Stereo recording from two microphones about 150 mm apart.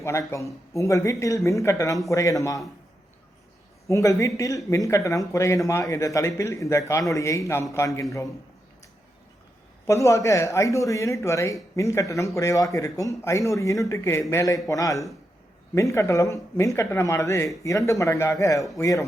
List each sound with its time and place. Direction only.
0.0 s speech: 20° left (ahead or behind)
3.8 s speech: 20° left (ahead or behind)
9.8 s speech: 20° left (ahead or behind)